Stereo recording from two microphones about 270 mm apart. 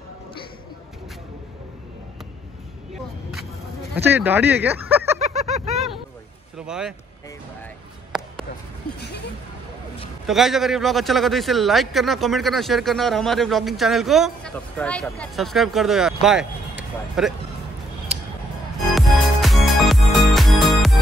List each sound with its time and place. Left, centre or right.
3.9 s speech: centre
5.2 s a sound: right
6.6 s a man's voice: centre
9.0 s speech: left
10.2 s a man's voice: centre
18.9 s music: centre